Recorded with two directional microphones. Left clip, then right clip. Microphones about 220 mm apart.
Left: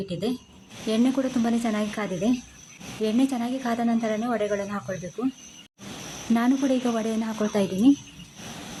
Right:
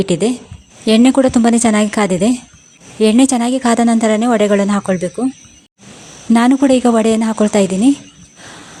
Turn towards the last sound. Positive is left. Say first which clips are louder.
# right 10 dB
turn(degrees=-40)  # may be behind; listen again after turning